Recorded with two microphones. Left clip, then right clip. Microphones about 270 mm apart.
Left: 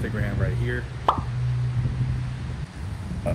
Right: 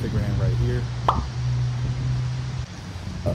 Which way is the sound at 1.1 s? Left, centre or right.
Centre.